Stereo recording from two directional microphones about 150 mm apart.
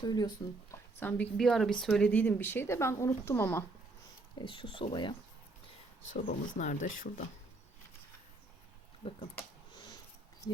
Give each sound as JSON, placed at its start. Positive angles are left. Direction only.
{"t": 0.0, "sound": "speech", "side_deg": 25}
{"t": 0.7, "sound": "a woman's voice", "side_deg": 10}
{"t": 4.4, "sound": "speech", "side_deg": 35}
{"t": 6.1, "sound": "speech", "side_deg": 60}
{"t": 9.0, "sound": "speech", "side_deg": 40}
{"t": 9.7, "sound": "a sound", "side_deg": 30}